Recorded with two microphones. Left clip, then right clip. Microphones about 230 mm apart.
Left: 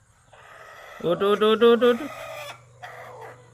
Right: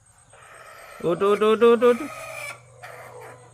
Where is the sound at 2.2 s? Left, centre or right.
Left.